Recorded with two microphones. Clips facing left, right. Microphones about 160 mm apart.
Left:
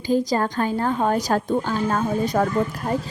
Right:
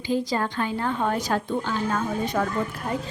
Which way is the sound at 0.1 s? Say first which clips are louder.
Left 4 dB; 40° left (ahead or behind).